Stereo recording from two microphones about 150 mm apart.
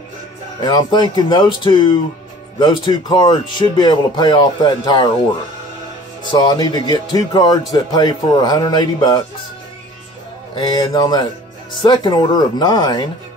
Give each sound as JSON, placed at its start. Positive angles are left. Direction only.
{"t": 0.6, "sound": "speech", "side_deg": 30}
{"t": 6.3, "sound": "speech", "side_deg": 30}
{"t": 10.5, "sound": "speech", "side_deg": 30}